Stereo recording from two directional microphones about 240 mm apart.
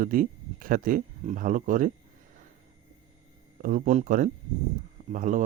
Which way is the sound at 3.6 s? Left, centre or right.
Right.